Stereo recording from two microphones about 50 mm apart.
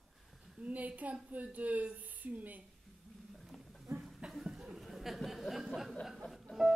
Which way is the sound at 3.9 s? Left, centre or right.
Right.